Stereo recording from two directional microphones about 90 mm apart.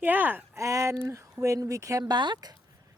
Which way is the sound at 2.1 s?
55° right (ahead or behind).